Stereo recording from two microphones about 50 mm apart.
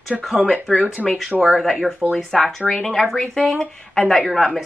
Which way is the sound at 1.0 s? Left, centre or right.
Right.